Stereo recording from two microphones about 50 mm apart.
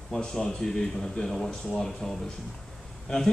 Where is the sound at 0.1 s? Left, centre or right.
Centre.